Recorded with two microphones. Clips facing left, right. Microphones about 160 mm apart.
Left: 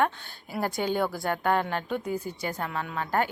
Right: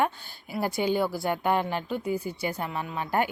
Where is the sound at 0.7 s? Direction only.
45° left (ahead or behind).